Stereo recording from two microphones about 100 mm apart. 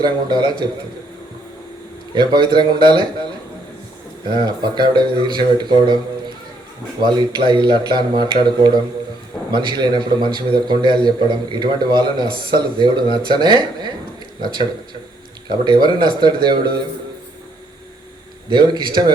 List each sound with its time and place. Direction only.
0.0 s a man's voice: 45° right (ahead or behind)
2.1 s a man's voice: 50° right (ahead or behind)
4.3 s a man's voice: 50° right (ahead or behind)
18.4 s a man's voice: 50° right (ahead or behind)